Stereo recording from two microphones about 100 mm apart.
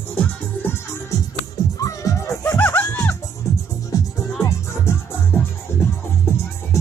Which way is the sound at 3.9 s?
35° left (ahead or behind).